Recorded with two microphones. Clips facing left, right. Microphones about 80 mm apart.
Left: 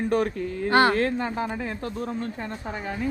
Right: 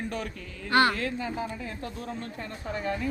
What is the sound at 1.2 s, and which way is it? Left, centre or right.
Speech, left.